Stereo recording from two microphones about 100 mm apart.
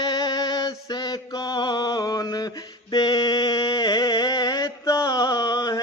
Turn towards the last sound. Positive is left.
turn(degrees=40)  # may be behind; listen again after turning